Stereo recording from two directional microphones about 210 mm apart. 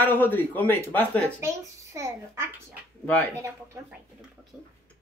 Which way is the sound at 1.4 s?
15° right (ahead or behind).